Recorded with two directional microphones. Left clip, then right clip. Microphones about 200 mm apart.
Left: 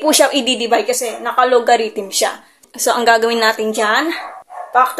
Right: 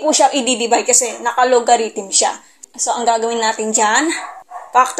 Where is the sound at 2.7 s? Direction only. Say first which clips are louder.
Left 3 dB; 25° left (ahead or behind).